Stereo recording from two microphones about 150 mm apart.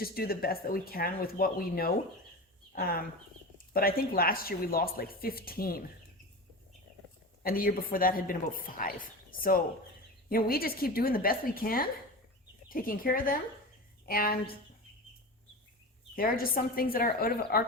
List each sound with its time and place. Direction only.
0.0 s speech: 90° left
2.7 s speech: 90° left
3.7 s speech: 80° left
7.4 s speech: 75° left (ahead or behind)
10.2 s speech: 80° left
16.1 s speech: 75° left (ahead or behind)